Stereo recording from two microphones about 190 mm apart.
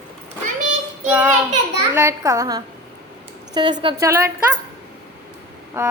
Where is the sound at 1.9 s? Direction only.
15° right (ahead or behind).